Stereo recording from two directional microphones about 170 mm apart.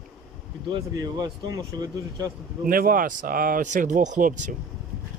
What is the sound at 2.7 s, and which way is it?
Speech, 55° right (ahead or behind).